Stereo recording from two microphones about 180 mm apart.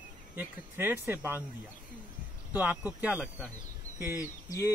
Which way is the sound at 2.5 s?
10° right (ahead or behind).